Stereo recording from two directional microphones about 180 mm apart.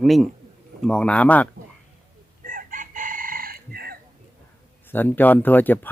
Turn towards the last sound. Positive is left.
turn(degrees=10)  # may be behind; listen again after turning